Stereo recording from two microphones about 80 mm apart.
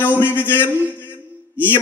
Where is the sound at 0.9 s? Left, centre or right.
Left.